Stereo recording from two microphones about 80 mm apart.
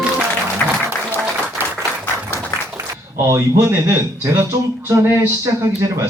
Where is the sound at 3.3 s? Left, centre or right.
Right.